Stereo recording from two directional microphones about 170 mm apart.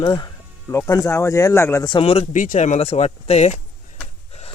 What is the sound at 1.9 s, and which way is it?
Speech, 35° left (ahead or behind).